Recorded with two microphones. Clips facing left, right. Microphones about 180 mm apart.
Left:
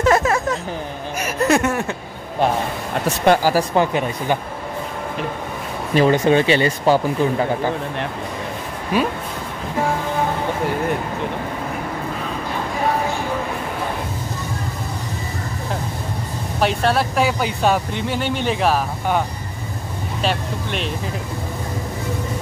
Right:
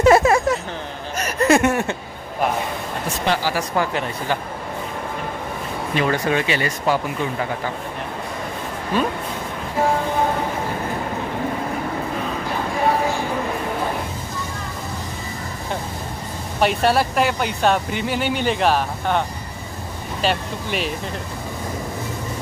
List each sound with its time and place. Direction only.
0.0 s a sound: 10° right (ahead or behind)
1.2 s speech: centre (ahead or behind)
3.3 s speech: 45° left (ahead or behind)
3.7 s speech: 20° left (ahead or behind)
6.0 s speech: 25° left (ahead or behind)
8.9 s speech: 10° left (ahead or behind)
16.5 s speech: centre (ahead or behind)